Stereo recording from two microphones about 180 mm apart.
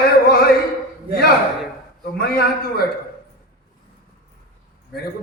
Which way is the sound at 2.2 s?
60° left (ahead or behind).